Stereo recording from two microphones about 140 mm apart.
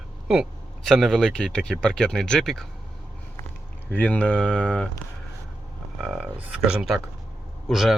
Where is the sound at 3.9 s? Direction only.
10° left (ahead or behind).